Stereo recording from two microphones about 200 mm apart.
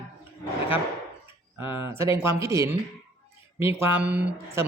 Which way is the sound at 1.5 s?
10° right (ahead or behind).